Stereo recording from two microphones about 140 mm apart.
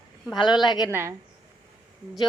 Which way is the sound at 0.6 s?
30° left (ahead or behind).